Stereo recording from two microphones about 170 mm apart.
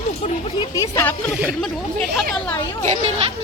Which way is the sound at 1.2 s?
Centre (ahead or behind).